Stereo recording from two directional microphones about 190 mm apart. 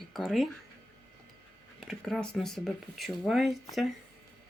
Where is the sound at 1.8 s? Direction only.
Centre (ahead or behind).